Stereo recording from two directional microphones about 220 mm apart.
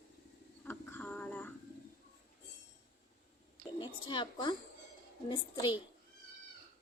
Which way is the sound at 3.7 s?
20° left (ahead or behind).